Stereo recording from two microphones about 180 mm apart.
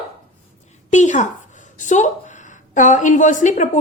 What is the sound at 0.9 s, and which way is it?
A woman's voice, 40° left (ahead or behind).